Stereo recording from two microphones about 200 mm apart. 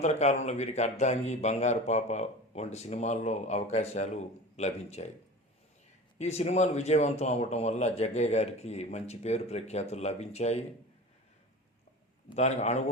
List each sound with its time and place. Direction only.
0.0 s a man's voice: 35° left (ahead or behind)
6.1 s a man's voice: 35° left (ahead or behind)
12.4 s a man's voice: 35° left (ahead or behind)